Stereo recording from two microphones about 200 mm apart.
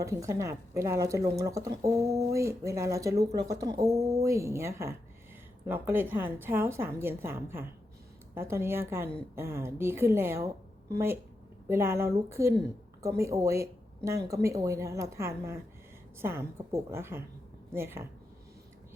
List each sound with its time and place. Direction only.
0.0 s speech: 15° right (ahead or behind)